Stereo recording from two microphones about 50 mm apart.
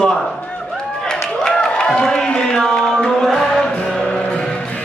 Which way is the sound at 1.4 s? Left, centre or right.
Centre.